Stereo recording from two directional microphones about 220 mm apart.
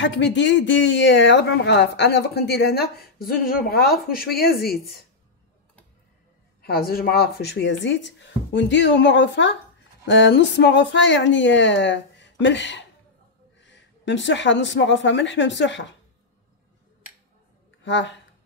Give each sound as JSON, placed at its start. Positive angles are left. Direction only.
{"t": 0.0, "sound": "speech", "side_deg": 55}
{"t": 6.6, "sound": "speech", "side_deg": 45}
{"t": 17.8, "sound": "speech", "side_deg": 55}